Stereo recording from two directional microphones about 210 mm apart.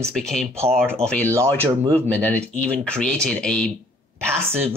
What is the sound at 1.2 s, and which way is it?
Speech, 15° right (ahead or behind).